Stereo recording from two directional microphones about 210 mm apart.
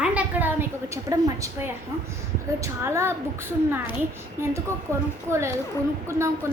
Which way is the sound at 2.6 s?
10° right (ahead or behind).